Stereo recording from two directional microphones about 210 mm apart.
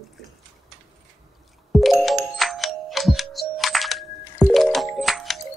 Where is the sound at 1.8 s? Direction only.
Centre (ahead or behind).